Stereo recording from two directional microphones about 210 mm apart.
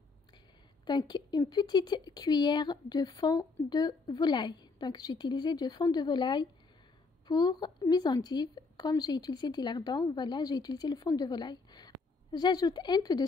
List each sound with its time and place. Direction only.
0.8 s speech: 20° left (ahead or behind)